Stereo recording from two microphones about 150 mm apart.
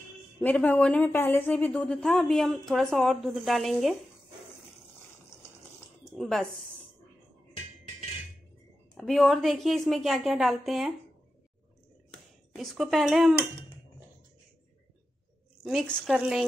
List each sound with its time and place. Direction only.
0.4 s a woman's voice: 10° left (ahead or behind)
6.1 s speech: centre (ahead or behind)
8.9 s a woman's voice: centre (ahead or behind)
12.1 s speech: centre (ahead or behind)
15.6 s a woman's voice: centre (ahead or behind)